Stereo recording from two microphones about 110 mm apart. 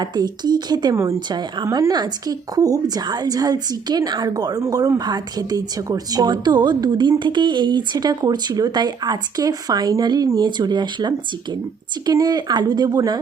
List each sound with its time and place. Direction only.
0.0 s a woman's voice: 40° right (ahead or behind)